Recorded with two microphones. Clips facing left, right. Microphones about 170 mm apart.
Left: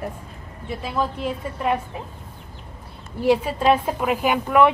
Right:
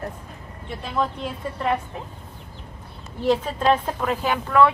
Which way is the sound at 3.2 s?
10° left (ahead or behind).